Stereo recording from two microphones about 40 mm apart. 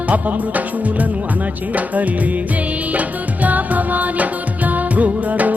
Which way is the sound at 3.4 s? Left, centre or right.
Right.